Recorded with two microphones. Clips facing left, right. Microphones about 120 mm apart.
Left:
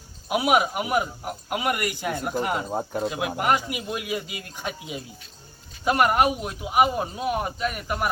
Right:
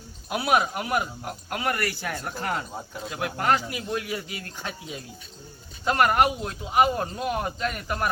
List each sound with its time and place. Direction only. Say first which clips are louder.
0.3 s speech: left 2 dB; 15° left (ahead or behind)
2.6 s speech: left 9 dB; 50° left (ahead or behind)
3.1 s speech: right 1 dB; 15° left (ahead or behind)